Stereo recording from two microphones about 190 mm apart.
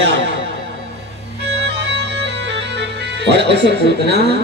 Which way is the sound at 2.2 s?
65° right (ahead or behind).